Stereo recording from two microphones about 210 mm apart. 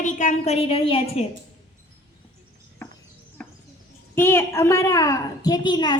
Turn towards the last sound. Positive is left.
turn(degrees=20)  # may be behind; listen again after turning